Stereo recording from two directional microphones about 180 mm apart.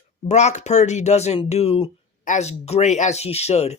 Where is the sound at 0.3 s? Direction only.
40° left (ahead or behind).